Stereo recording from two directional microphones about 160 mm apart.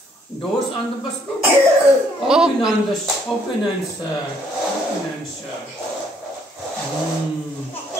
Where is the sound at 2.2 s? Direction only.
5° right (ahead or behind).